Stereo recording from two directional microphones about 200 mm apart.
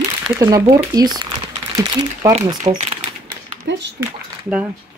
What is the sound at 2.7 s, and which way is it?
Speech, 25° right (ahead or behind).